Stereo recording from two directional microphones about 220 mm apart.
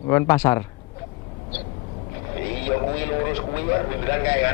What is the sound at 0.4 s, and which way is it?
Speech, 15° left (ahead or behind).